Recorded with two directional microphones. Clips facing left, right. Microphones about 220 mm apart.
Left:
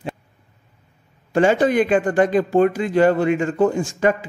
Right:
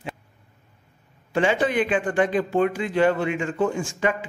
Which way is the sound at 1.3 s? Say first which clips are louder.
Left 6 dB; 40° left (ahead or behind).